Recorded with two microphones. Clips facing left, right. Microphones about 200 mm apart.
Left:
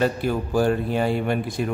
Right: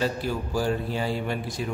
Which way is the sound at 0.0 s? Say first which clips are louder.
Left 5 dB; 55° left (ahead or behind).